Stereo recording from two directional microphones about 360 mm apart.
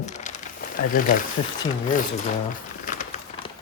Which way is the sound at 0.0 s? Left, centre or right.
Centre.